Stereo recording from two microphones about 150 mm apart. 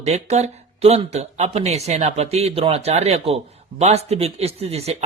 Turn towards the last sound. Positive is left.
turn(degrees=-45)  # may be behind; listen again after turning